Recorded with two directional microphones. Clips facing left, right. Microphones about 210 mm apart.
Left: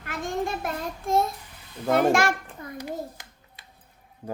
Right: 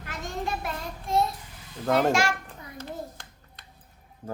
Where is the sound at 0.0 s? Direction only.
50° left (ahead or behind).